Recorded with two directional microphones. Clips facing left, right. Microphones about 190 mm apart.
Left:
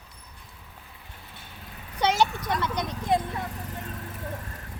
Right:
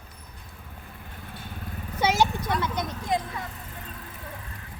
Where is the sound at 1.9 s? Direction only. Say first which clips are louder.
Even; 10° right (ahead or behind).